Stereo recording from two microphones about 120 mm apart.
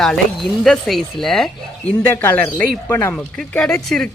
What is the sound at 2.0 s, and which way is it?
Speech, 15° left (ahead or behind).